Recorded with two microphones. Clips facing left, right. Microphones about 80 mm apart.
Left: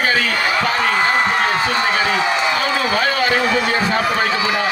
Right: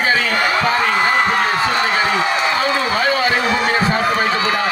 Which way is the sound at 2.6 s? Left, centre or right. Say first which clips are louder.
Right 1 dB; right.